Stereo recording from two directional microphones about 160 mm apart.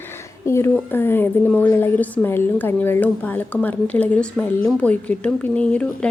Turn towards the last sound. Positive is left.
turn(degrees=10)  # may be behind; listen again after turning